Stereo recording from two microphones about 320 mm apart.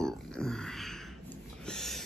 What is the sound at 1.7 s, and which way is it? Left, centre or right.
Owl, centre.